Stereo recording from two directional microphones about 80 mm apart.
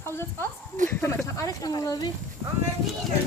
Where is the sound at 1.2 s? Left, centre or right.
Left.